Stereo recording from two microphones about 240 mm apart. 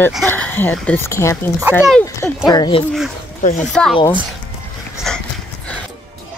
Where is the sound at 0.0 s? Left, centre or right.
Centre.